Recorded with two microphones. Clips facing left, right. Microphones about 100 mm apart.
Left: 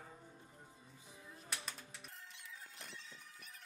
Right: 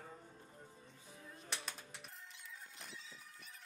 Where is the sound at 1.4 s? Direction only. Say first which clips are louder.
Right 1 dB; centre (ahead or behind).